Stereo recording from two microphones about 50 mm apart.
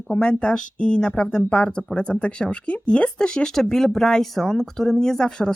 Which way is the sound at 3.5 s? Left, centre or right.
Centre.